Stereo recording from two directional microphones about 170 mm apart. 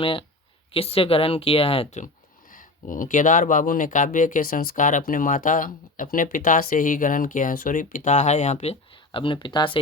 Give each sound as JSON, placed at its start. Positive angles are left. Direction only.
{"t": 0.0, "sound": "a woman's voice", "side_deg": 30}
{"t": 2.5, "sound": "speech", "side_deg": 55}